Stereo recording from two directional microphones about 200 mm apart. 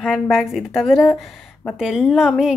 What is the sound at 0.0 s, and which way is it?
Speech, centre (ahead or behind).